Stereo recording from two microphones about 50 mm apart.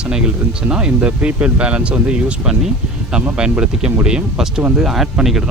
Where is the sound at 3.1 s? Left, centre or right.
Centre.